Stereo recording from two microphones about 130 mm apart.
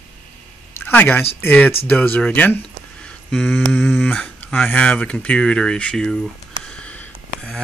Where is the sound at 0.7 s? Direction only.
15° left (ahead or behind).